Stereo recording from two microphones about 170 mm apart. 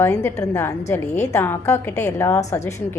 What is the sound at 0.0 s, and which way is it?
A woman's voice, 15° left (ahead or behind).